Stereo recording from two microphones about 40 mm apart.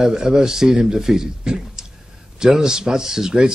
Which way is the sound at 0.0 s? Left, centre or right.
Centre.